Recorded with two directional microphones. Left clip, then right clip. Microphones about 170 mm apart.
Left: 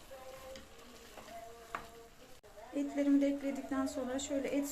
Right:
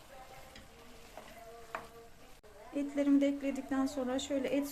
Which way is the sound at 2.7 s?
25° right (ahead or behind).